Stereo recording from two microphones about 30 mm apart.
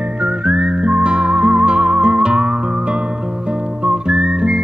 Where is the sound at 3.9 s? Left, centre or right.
Right.